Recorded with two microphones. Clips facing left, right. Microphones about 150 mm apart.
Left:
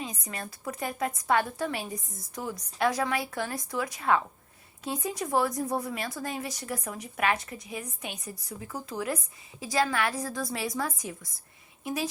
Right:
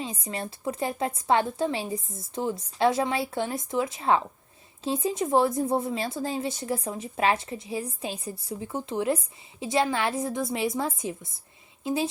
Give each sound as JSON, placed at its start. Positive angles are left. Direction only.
{"t": 0.0, "sound": "speech", "side_deg": -25}